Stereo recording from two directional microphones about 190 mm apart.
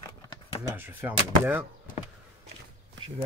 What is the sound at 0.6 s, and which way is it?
Speech, 10° right (ahead or behind).